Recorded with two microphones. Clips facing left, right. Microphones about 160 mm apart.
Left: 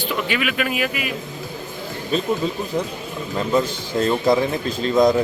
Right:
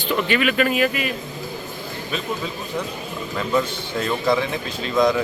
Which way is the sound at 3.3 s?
30° left (ahead or behind).